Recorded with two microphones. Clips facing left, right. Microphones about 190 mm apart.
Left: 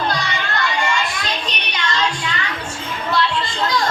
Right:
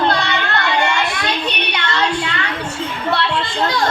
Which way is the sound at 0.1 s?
65° right (ahead or behind).